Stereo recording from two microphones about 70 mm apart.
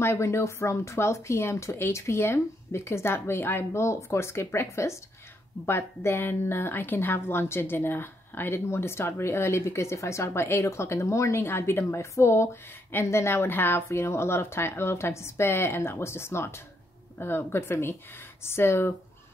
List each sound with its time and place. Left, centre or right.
0.0 s a woman's voice: left